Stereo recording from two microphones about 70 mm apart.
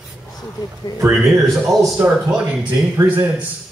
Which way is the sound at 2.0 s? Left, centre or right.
Centre.